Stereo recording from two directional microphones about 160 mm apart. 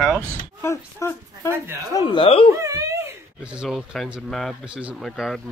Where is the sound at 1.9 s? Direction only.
30° left (ahead or behind).